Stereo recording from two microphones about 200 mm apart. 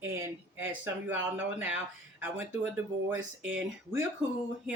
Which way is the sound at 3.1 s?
10° right (ahead or behind).